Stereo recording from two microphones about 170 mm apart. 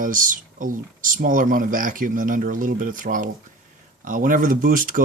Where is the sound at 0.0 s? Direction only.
50° right (ahead or behind).